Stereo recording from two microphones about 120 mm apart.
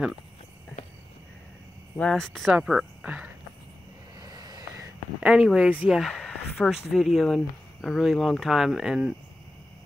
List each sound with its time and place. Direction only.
2.0 s speech: 5° left (ahead or behind)
4.2 s vehicle: 35° right (ahead or behind)
5.2 s speech: 5° right (ahead or behind)